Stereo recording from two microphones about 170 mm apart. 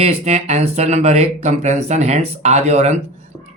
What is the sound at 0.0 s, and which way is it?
Speech, 40° right (ahead or behind).